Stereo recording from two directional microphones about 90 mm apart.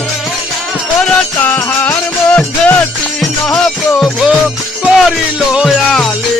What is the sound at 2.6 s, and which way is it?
Music, 10° left (ahead or behind).